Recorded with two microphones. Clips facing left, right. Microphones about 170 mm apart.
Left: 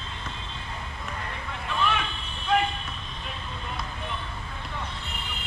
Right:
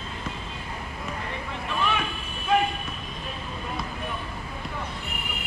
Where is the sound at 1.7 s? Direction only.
5° right (ahead or behind).